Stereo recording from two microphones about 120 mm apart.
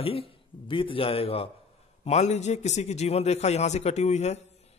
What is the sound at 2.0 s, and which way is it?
A man's voice, 70° left (ahead or behind).